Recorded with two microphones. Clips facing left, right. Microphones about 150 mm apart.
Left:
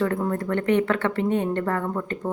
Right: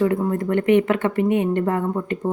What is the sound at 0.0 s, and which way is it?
Speech, 10° right (ahead or behind).